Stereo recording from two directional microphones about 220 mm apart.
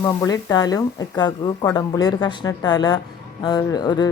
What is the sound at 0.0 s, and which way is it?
Speech, 15° left (ahead or behind).